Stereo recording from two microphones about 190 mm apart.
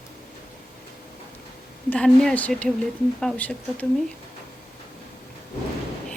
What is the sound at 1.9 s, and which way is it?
A woman's voice, 5° left (ahead or behind).